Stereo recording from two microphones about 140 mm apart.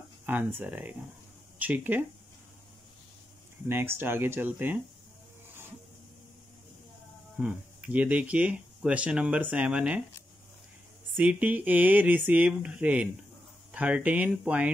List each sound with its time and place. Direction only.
0.3 s speech: 15° right (ahead or behind)
3.6 s speech: 15° right (ahead or behind)
7.3 s speech: 10° right (ahead or behind)
11.1 s speech: 10° right (ahead or behind)